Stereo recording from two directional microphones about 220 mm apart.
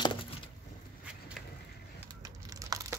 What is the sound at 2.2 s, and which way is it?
Computer keyboard, 15° right (ahead or behind).